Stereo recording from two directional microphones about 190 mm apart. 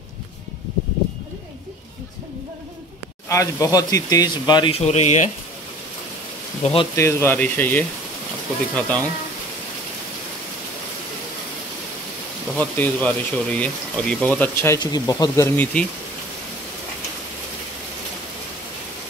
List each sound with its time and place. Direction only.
3.3 s speech: 15° left (ahead or behind)
4.7 s speech: 35° left (ahead or behind)
6.6 s speech: 30° left (ahead or behind)
7.0 s speech: 15° left (ahead or behind)
12.5 s speech: 10° left (ahead or behind)